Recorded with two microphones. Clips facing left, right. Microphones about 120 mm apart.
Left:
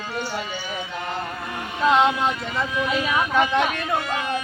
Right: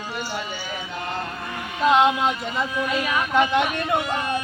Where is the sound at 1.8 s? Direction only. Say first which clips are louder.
Right 1 dB; 15° right (ahead or behind).